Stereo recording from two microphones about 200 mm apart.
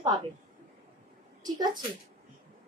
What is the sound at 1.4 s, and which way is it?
Speech, 20° right (ahead or behind).